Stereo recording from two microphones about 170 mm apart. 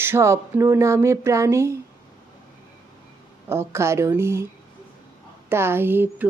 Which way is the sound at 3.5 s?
15° right (ahead or behind).